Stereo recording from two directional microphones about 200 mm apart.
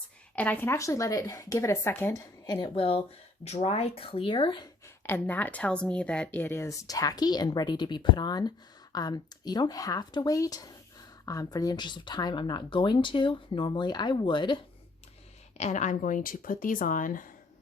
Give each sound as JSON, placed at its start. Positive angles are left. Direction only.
{"t": 0.3, "sound": "speech", "side_deg": 10}
{"t": 5.0, "sound": "speech", "side_deg": 10}
{"t": 15.5, "sound": "speech", "side_deg": 35}